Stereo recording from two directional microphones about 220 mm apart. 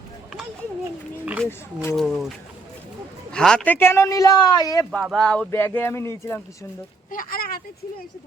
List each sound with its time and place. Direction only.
1.2 s speech: 5° right (ahead or behind)
1.5 s a man's voice: 10° left (ahead or behind)
2.0 s speech: centre (ahead or behind)
3.3 s a man's voice: 5° left (ahead or behind)
4.9 s a man's voice: centre (ahead or behind)
7.1 s speech: 40° left (ahead or behind)